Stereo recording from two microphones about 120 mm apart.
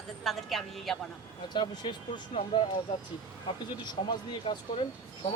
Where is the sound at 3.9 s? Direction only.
40° left (ahead or behind).